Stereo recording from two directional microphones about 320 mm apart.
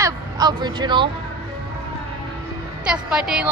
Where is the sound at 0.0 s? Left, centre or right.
Centre.